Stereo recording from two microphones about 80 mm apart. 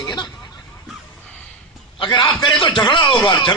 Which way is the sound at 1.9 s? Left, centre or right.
Left.